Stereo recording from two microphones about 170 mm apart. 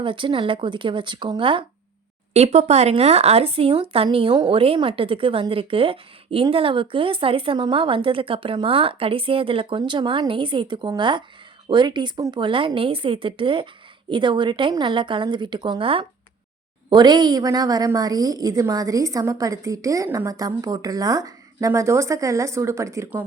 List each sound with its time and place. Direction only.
0.0 s a woman's voice: 30° right (ahead or behind)